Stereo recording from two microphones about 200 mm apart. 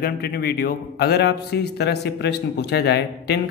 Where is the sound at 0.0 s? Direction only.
50° left (ahead or behind).